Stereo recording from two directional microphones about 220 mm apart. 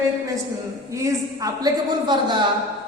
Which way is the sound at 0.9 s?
15° right (ahead or behind).